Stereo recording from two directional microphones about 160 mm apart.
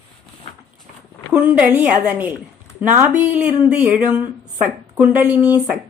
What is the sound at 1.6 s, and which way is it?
Speech, 10° right (ahead or behind).